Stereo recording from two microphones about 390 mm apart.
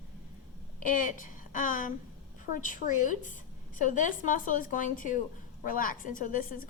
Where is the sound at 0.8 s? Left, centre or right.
Centre.